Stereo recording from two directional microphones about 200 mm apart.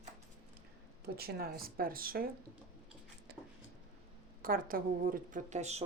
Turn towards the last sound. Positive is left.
turn(degrees=-35)  # may be behind; listen again after turning